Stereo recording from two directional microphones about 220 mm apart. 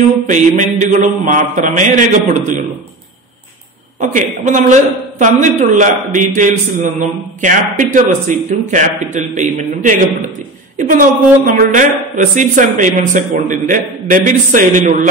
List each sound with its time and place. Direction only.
0.3 s a man's voice: 35° right (ahead or behind)
4.0 s a man's voice: 35° right (ahead or behind)